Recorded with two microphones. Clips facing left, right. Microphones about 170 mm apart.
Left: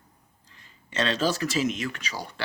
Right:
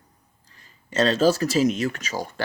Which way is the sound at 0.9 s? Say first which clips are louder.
Right 7 dB; 40° right (ahead or behind).